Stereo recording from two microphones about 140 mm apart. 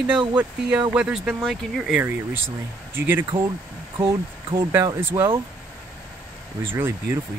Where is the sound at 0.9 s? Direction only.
5° right (ahead or behind).